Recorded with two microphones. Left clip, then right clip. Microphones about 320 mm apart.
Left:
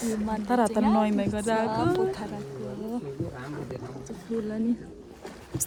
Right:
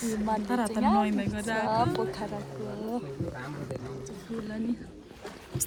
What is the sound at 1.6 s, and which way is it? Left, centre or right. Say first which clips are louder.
Speech: left 2 dB; centre.